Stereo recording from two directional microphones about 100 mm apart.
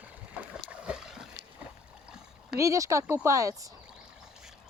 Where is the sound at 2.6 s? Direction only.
30° right (ahead or behind).